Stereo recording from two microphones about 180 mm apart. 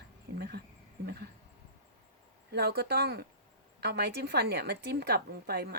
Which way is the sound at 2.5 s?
60° right (ahead or behind).